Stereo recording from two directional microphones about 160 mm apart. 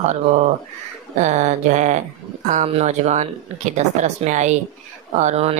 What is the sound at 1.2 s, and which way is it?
Speech, 45° right (ahead or behind).